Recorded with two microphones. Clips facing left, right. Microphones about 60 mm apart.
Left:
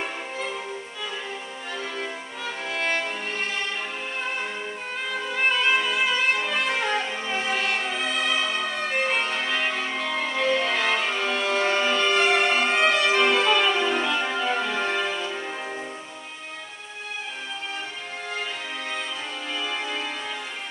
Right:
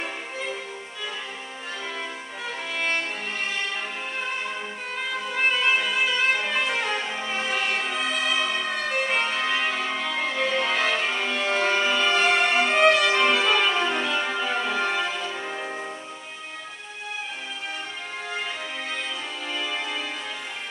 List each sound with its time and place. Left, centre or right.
2.7 s music: centre
5.4 s violin: centre
9.1 s music: centre
19.5 s music: centre